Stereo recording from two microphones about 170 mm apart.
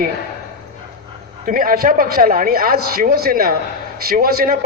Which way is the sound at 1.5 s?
55° right (ahead or behind).